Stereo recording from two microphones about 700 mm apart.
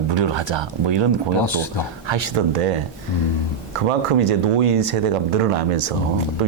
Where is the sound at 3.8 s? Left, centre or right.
Right.